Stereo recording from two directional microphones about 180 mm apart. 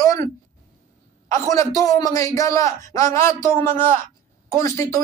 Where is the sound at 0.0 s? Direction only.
20° left (ahead or behind).